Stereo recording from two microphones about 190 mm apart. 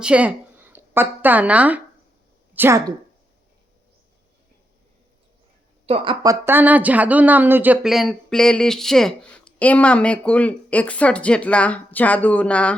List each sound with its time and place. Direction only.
0.0 s speech: 5° right (ahead or behind)
5.8 s speech: 30° right (ahead or behind)
6.2 s a woman's voice: 10° right (ahead or behind); by 12.7 s 5° left (ahead or behind)